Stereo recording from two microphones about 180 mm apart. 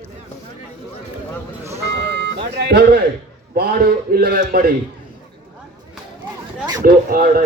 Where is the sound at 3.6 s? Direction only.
60° right (ahead or behind).